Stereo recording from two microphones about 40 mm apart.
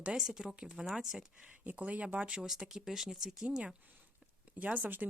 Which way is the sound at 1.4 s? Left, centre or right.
Right.